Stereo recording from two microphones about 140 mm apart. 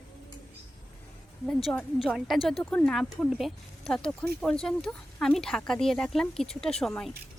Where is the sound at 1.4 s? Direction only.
Centre (ahead or behind).